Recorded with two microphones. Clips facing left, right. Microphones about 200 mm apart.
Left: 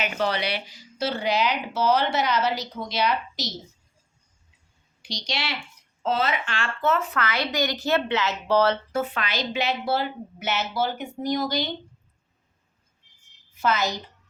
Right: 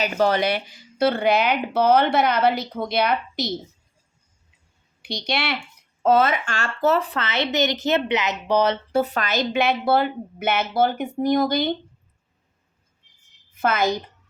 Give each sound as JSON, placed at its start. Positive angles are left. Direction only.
{"t": 0.0, "sound": "speech", "side_deg": -45}
{"t": 5.0, "sound": "a woman's voice", "side_deg": -60}
{"t": 8.9, "sound": "a woman's voice", "side_deg": -35}
{"t": 13.6, "sound": "a woman's voice", "side_deg": -55}